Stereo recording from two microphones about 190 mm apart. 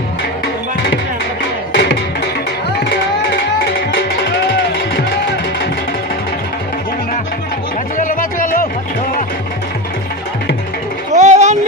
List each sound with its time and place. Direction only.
0.4 s music: 65° left (ahead or behind)
7.9 s music: 45° left (ahead or behind)
11.1 s a sound: 40° right (ahead or behind)